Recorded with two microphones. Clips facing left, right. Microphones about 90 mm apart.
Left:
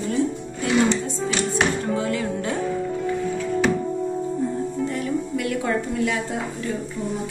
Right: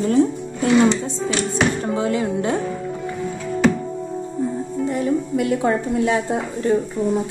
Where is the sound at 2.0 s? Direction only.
25° right (ahead or behind).